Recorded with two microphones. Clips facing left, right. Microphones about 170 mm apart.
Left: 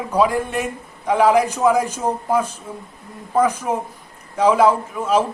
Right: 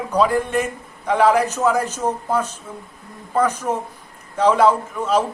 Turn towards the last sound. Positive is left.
turn(degrees=10)  # may be behind; listen again after turning